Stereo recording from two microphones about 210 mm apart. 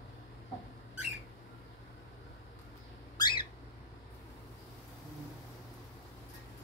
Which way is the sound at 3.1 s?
20° left (ahead or behind).